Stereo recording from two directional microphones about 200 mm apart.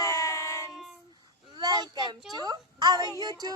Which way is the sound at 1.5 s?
20° right (ahead or behind).